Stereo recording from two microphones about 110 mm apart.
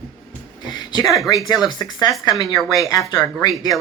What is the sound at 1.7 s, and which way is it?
Speech, 35° left (ahead or behind).